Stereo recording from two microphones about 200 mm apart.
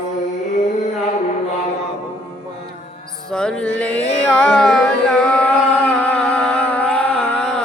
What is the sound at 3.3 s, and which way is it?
Carnatic music, 5° left (ahead or behind).